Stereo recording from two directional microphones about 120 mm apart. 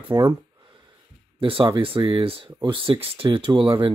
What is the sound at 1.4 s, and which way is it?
Speech, 50° right (ahead or behind).